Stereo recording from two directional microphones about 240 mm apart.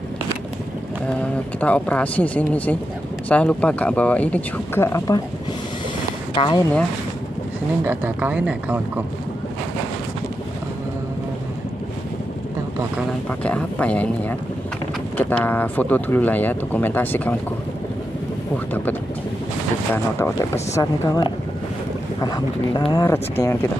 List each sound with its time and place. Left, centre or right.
1.2 s speech: centre
6.3 s speech: left
7.8 s speech: centre
13.4 s speech: centre
18.7 s speech: centre